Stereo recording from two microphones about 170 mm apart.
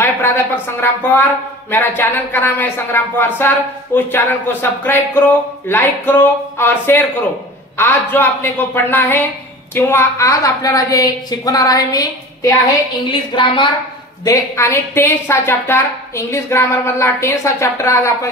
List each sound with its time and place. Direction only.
0.7 s a woman's voice: 15° left (ahead or behind); by 13.7 s 30° left (ahead or behind)
14.2 s speech: 20° left (ahead or behind)